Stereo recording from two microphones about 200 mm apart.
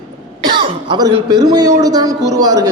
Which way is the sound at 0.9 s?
20° right (ahead or behind).